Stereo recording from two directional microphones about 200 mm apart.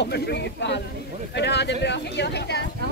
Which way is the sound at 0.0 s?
55° left (ahead or behind).